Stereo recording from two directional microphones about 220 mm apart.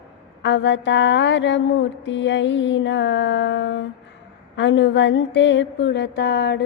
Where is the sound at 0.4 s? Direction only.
55° left (ahead or behind).